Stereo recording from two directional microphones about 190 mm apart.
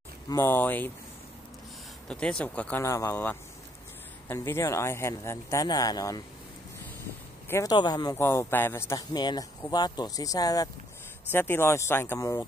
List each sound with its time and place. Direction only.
0.3 s speech: 10° left (ahead or behind)
2.0 s speech: 5° left (ahead or behind)
7.4 s speech: 15° left (ahead or behind)